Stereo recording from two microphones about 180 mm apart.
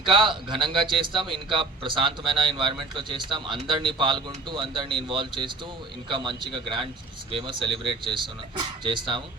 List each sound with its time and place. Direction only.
0.1 s speech: 25° right (ahead or behind)
1.2 s speech: centre (ahead or behind)
1.5 s speech: 30° right (ahead or behind)